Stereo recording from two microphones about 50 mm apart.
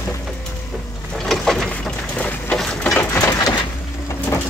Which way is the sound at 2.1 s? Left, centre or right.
Left.